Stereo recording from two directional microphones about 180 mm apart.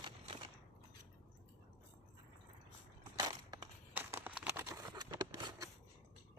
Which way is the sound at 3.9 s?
10° right (ahead or behind).